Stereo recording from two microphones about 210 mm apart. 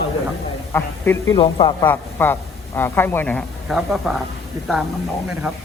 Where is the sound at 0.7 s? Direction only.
10° left (ahead or behind).